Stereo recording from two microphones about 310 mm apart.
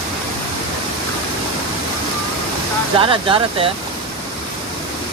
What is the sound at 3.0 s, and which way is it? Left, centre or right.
Speech, centre.